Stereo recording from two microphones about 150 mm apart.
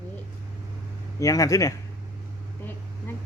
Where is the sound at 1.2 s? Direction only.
20° left (ahead or behind).